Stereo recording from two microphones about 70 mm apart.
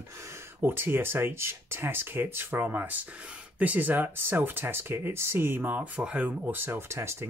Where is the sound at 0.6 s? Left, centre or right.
Right.